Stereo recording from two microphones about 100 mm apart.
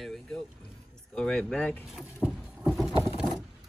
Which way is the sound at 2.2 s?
10° right (ahead or behind).